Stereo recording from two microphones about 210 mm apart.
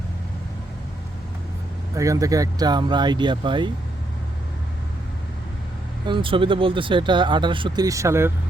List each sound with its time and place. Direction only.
2.0 s speech: 15° right (ahead or behind)
6.1 s speech: 25° right (ahead or behind)